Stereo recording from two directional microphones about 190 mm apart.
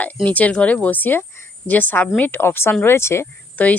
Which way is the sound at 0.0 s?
10° left (ahead or behind).